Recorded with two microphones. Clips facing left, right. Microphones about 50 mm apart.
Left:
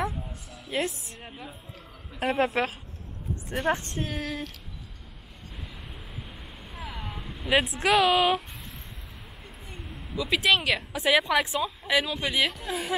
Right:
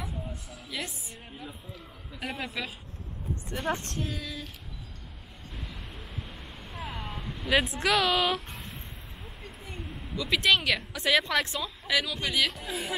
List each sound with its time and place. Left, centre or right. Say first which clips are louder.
0.7 s a woman's voice: left 8 dB; left
2.1 s a woman's voice: left 10 dB; left
3.4 s a woman's voice: left 5 dB; centre
4.0 s a woman's voice: left 4 dB; left
5.8 s vehicle: even; centre
7.4 s a woman's voice: left 2 dB; centre
9.7 s a sound: right 2 dB; centre
10.1 s a woman's voice: left 1 dB; centre
11.9 s speech: left 2 dB; left
12.5 s a woman's voice: left 3 dB; centre